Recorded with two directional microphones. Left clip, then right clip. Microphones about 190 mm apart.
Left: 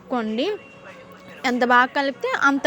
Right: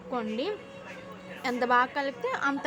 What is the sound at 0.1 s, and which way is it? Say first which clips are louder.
A woman's voice: left 8 dB; 30° left (ahead or behind).